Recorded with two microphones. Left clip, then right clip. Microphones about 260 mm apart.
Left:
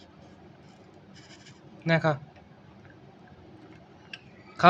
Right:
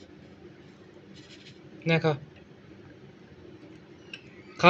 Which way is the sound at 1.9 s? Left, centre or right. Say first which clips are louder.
Left 1 dB; left.